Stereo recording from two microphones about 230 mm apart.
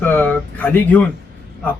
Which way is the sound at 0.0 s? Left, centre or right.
Centre.